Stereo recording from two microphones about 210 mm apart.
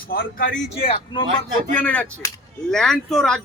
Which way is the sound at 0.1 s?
45° left (ahead or behind).